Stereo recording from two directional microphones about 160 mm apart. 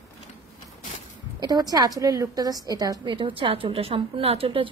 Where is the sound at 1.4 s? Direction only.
25° right (ahead or behind).